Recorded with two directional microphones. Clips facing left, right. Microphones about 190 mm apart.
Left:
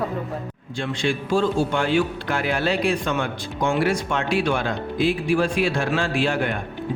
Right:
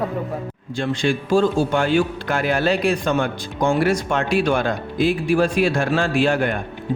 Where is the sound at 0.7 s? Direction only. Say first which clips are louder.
Right 3 dB; 45° right (ahead or behind).